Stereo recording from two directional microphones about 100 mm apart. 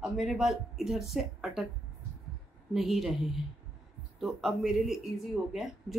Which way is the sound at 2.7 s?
5° right (ahead or behind).